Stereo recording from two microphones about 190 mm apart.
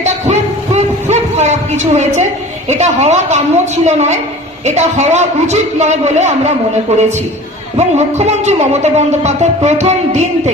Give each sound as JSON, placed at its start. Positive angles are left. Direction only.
{"t": 0.0, "sound": "a sound", "side_deg": -35}
{"t": 2.6, "sound": "music", "side_deg": -35}
{"t": 7.8, "sound": "music", "side_deg": -35}